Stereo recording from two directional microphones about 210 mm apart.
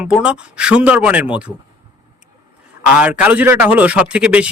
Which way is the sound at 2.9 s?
5° right (ahead or behind).